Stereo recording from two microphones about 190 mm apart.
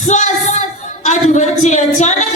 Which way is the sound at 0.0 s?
40° left (ahead or behind).